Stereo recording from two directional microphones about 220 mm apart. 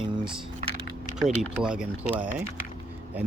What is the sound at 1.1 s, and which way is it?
Speech, centre (ahead or behind).